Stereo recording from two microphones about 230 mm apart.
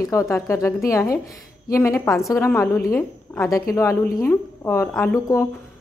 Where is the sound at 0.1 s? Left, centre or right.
Centre.